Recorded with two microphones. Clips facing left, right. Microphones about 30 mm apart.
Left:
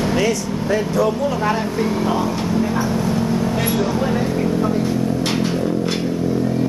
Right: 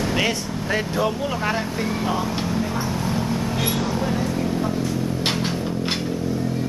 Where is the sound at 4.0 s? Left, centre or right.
Centre.